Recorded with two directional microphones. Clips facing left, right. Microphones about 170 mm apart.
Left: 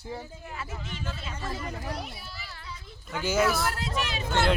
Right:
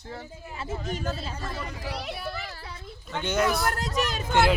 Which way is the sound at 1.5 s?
80° right.